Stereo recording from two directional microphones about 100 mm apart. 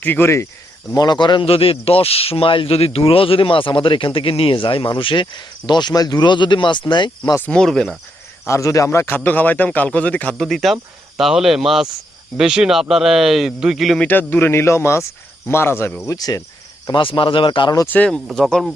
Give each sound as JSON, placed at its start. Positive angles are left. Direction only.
{"t": 0.0, "sound": "speech", "side_deg": 20}
{"t": 0.9, "sound": "a man's voice", "side_deg": 45}
{"t": 7.3, "sound": "a man's voice", "side_deg": 10}
{"t": 8.4, "sound": "a man's voice", "side_deg": 30}
{"t": 10.4, "sound": "speech", "side_deg": 0}
{"t": 14.0, "sound": "speech", "side_deg": 20}
{"t": 16.0, "sound": "cricket", "side_deg": 40}
{"t": 16.9, "sound": "a man's voice", "side_deg": 55}
{"t": 17.8, "sound": "a man's voice", "side_deg": 15}